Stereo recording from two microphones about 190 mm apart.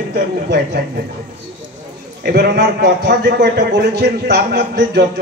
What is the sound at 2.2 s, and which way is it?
A man's voice, 60° right (ahead or behind).